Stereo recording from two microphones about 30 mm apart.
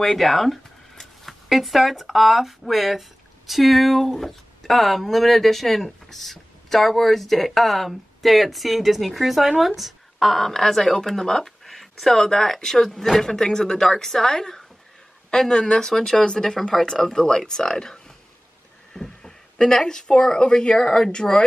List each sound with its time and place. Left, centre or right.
0.0 s speech: centre
1.2 s zipper: centre
2.1 s speech: centre
10.1 s speech: centre
13.3 s speech: left